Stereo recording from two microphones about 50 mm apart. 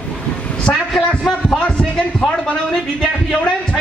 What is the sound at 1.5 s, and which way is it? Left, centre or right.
Heart sounds, left.